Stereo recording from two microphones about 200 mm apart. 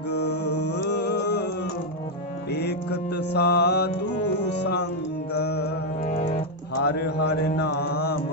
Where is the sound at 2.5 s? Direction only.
55° left (ahead or behind).